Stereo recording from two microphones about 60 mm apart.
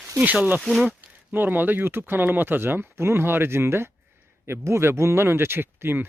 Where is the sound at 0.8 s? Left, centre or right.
Right.